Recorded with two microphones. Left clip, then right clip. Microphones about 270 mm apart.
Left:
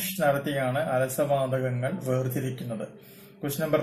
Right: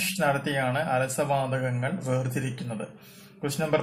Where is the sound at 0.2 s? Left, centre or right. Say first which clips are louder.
Left 2 dB; centre.